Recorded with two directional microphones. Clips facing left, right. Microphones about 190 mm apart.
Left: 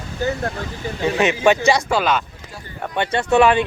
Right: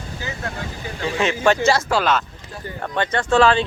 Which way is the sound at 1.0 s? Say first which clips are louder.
Left 3 dB; 20° left (ahead or behind).